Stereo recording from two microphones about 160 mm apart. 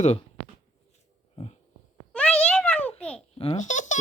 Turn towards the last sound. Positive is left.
turn(degrees=50)  # may be behind; listen again after turning